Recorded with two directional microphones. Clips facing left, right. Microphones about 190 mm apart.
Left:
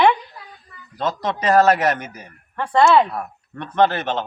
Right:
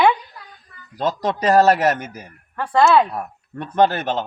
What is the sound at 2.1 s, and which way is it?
A woman's voice, 5° right (ahead or behind).